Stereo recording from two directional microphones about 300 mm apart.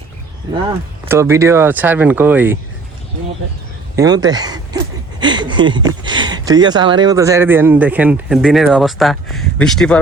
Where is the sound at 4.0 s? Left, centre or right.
Centre.